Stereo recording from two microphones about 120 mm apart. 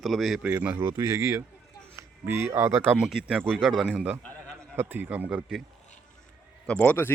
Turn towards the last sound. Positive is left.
turn(degrees=10)  # may be behind; listen again after turning